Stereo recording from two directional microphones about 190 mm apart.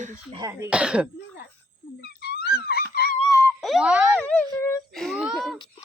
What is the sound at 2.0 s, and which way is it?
Wail, 60° left (ahead or behind).